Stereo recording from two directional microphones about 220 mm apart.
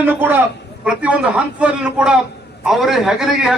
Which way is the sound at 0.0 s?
10° right (ahead or behind).